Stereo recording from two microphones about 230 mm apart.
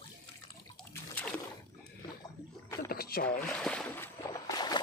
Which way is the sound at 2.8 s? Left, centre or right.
Left.